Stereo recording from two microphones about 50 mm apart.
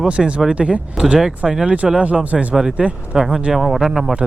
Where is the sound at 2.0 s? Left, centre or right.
Right.